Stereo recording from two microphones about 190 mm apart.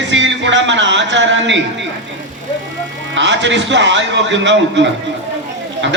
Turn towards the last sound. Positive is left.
turn(degrees=-70)  # may be behind; listen again after turning